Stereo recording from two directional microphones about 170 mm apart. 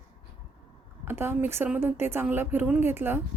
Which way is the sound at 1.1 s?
15° right (ahead or behind).